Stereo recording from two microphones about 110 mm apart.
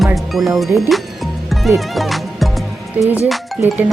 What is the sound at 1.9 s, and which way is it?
Music, centre (ahead or behind).